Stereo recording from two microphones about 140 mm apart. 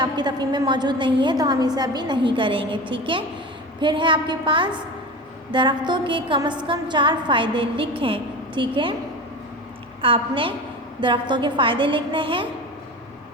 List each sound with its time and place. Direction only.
0.0 s a woman's voice: 30° right (ahead or behind)
10.0 s a woman's voice: 40° right (ahead or behind)